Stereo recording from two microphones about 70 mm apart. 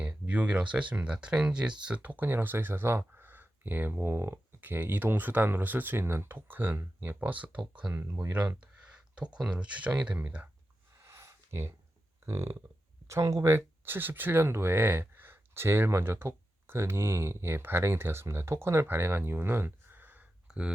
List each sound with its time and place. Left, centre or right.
0.0 s speech: centre
8.0 s speech: right
9.1 s speech: centre
11.0 s a sound: right
13.1 s speech: right
20.5 s speech: centre